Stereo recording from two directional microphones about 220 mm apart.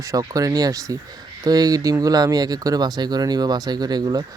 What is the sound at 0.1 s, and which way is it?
Speech, 15° right (ahead or behind).